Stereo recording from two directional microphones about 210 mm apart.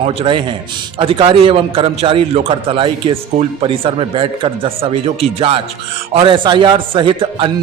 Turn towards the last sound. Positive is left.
turn(degrees=-25)  # may be behind; listen again after turning